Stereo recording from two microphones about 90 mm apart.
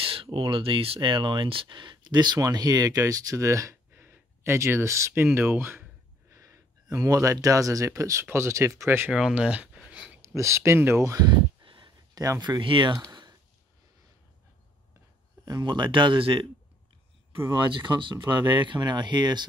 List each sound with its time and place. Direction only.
0.0 s speech: 85° right; by 5.9 s 25° right (ahead or behind)
6.3 s speech: 35° right (ahead or behind)
9.1 s speech: 10° right (ahead or behind)
9.8 s a sound: 10° right (ahead or behind)
10.2 s speech: 35° right (ahead or behind)
11.6 s a sound: 70° right (ahead or behind)
12.2 s speech: 45° right (ahead or behind); by 12.9 s 60° right (ahead or behind)
15.4 s speech: 50° right (ahead or behind); by 16.4 s 75° right (ahead or behind)
17.8 s speech: 65° right (ahead or behind)